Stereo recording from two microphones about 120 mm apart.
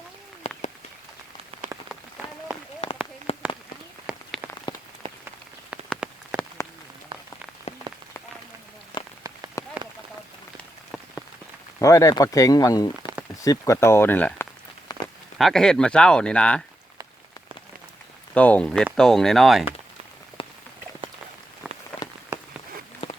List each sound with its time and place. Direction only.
0.4 s a sound: 55° left (ahead or behind)
3.3 s a sound: 55° left (ahead or behind)
4.1 s rain on surface: 10° right (ahead or behind)
5.0 s rain on surface: 50° right (ahead or behind)
5.7 s rain on surface: 5° right (ahead or behind)
7.9 s rain on surface: 40° right (ahead or behind)
8.9 s rain on surface: 40° left (ahead or behind)
9.6 s a sound: 25° left (ahead or behind)
11.8 s speech: 25° left (ahead or behind)
14.9 s a sound: 30° left (ahead or behind)
15.4 s speech: 5° left (ahead or behind)
18.3 s speech: 10° left (ahead or behind)